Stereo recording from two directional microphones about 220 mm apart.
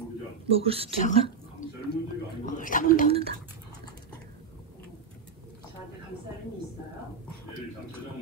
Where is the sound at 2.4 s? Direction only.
35° left (ahead or behind).